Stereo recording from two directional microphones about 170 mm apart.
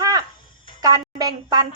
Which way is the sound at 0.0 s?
20° right (ahead or behind).